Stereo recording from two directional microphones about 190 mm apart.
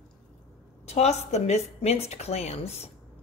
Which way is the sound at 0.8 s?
35° left (ahead or behind).